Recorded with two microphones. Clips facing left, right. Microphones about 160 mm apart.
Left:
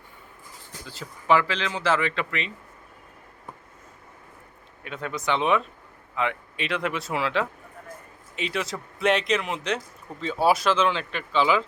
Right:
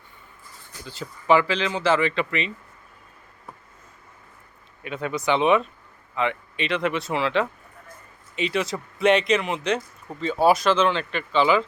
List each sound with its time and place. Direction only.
0.9 s speech: centre (ahead or behind)
4.8 s speech: 5° right (ahead or behind)